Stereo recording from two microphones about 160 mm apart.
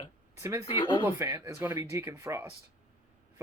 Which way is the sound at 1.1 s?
15° right (ahead or behind).